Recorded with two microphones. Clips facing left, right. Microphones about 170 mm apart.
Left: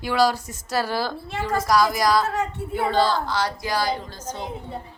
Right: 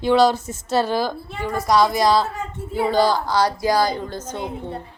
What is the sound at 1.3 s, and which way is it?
Speech, 90° left.